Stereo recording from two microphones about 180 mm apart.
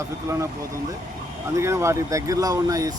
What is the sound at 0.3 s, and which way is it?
Speech, 15° right (ahead or behind).